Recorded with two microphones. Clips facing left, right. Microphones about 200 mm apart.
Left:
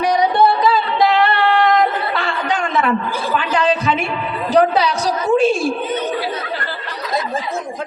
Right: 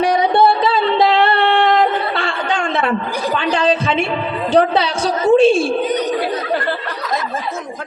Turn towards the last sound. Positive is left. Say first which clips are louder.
# right 5 dB
turn(degrees=-55)  # may be behind; listen again after turning